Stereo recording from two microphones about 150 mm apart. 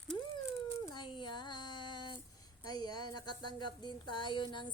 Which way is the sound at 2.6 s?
25° left (ahead or behind).